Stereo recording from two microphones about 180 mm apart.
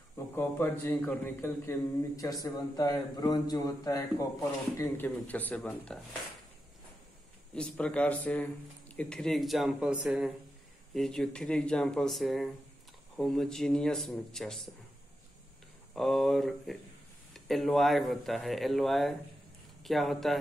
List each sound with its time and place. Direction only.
0.4 s a man's voice: 10° left (ahead or behind)
7.5 s speech: 5° left (ahead or behind)
15.9 s speech: centre (ahead or behind)